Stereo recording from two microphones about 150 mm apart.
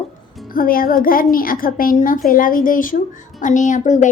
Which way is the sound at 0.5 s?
75° left (ahead or behind).